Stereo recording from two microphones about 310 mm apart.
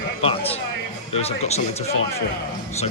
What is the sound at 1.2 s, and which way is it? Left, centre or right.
Speech, centre.